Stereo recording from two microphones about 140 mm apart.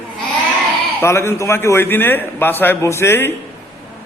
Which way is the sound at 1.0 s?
20° left (ahead or behind).